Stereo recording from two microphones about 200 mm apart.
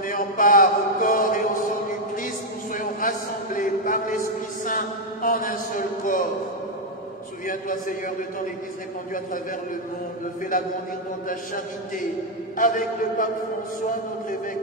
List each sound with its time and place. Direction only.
0.0 s mantra: 40° left (ahead or behind)
2.1 s a sound: 40° left (ahead or behind)
4.6 s a man's voice: 40° left (ahead or behind)
7.4 s a man's voice: 40° left (ahead or behind)
12.5 s a man's voice: 40° left (ahead or behind)